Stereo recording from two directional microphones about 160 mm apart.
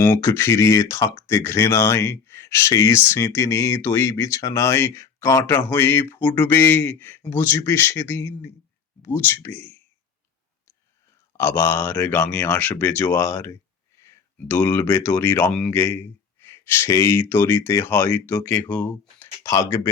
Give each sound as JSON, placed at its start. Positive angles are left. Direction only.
{"t": 0.0, "sound": "speech", "side_deg": 15}
{"t": 11.3, "sound": "speech", "side_deg": 15}